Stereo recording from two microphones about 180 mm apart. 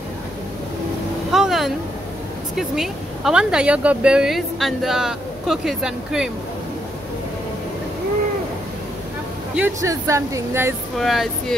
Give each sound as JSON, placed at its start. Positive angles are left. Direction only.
{"t": 1.3, "sound": "a sound", "side_deg": 0}
{"t": 2.5, "sound": "speech", "side_deg": 0}
{"t": 9.6, "sound": "speech", "side_deg": -15}
{"t": 11.0, "sound": "speech", "side_deg": 0}